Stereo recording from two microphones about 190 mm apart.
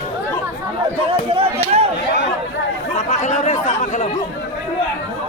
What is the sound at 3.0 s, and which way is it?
Speech, 35° left (ahead or behind).